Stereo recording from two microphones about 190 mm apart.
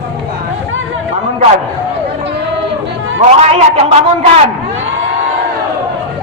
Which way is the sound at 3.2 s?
35° right (ahead or behind).